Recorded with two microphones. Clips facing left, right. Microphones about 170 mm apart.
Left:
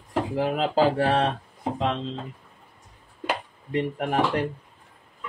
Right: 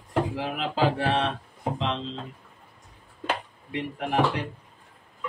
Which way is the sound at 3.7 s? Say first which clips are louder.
Left 4 dB; 45° left (ahead or behind).